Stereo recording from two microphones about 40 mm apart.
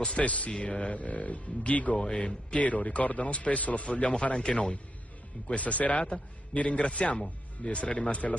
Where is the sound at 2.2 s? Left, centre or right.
Left.